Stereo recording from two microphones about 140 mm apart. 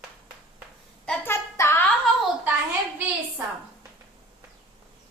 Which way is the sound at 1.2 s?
15° left (ahead or behind).